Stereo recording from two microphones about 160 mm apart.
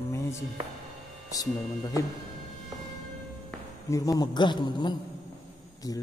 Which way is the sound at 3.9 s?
20° left (ahead or behind).